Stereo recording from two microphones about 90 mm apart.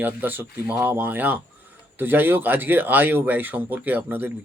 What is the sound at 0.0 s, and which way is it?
Speech, 20° right (ahead or behind).